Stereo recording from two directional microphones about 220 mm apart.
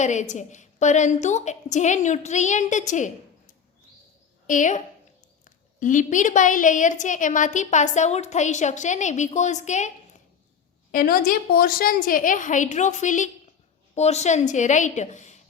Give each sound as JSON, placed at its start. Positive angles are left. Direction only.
{"t": 0.0, "sound": "a woman's voice", "side_deg": 35}
{"t": 10.9, "sound": "a woman's voice", "side_deg": 40}